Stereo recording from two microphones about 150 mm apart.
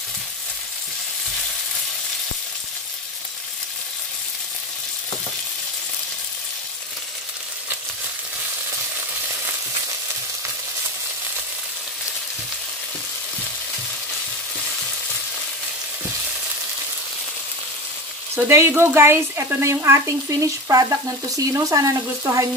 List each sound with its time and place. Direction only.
18.3 s speech: 15° right (ahead or behind)